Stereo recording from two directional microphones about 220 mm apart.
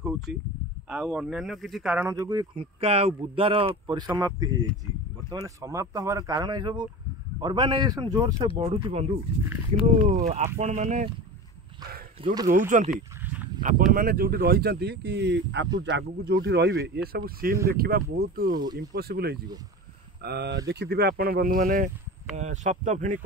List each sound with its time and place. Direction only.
0.0 s a sound: centre (ahead or behind)
0.8 s a man's voice: 5° right (ahead or behind); by 9.1 s 25° right (ahead or behind)
10.6 s speech: 35° right (ahead or behind)
12.4 s speech: 35° right (ahead or behind)
12.9 s dog: 5° right (ahead or behind)
13.6 s speech: 40° right (ahead or behind)
18.5 s a man's voice: 20° right (ahead or behind)
18.8 s speech: 45° right (ahead or behind)